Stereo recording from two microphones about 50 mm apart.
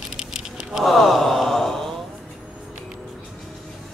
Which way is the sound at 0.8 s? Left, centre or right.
Centre.